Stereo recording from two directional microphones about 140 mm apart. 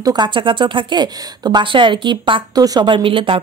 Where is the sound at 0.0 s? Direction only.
30° right (ahead or behind).